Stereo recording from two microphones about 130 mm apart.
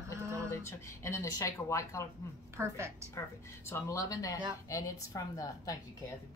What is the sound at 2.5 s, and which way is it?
Speech, 20° right (ahead or behind).